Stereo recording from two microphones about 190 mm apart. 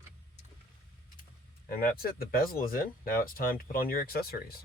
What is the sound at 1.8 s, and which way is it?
Speech, 50° left (ahead or behind).